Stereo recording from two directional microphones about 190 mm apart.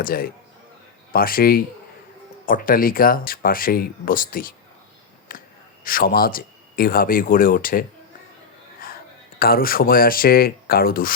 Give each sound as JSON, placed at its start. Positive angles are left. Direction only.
{"t": 0.0, "sound": "speech", "side_deg": 50}
{"t": 5.3, "sound": "a sound", "side_deg": 45}
{"t": 5.8, "sound": "speech", "side_deg": 50}
{"t": 9.4, "sound": "speech", "side_deg": 50}